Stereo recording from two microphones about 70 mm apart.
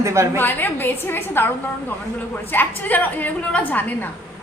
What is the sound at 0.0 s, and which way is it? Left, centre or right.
Speech, right.